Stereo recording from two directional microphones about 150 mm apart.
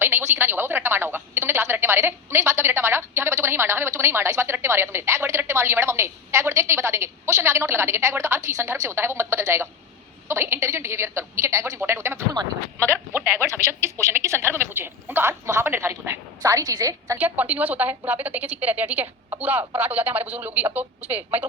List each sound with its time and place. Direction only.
0.0 s a woman's voice: 15° right (ahead or behind)
17.2 s a woman's voice: 10° right (ahead or behind)